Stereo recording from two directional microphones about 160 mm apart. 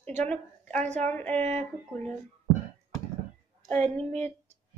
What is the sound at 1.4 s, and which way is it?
Speech, 45° right (ahead or behind).